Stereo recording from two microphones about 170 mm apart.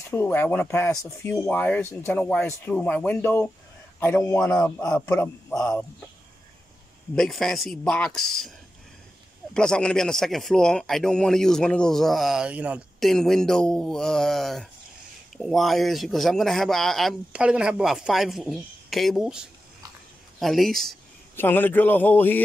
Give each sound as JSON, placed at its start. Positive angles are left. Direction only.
{"t": 0.1, "sound": "a man's voice", "side_deg": 10}
{"t": 7.2, "sound": "a man's voice", "side_deg": 0}